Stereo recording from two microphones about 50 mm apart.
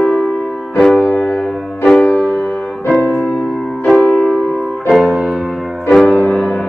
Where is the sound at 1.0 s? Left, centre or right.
Left.